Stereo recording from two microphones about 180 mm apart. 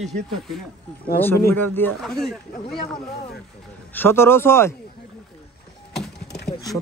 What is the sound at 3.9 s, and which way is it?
Speech, 10° left (ahead or behind).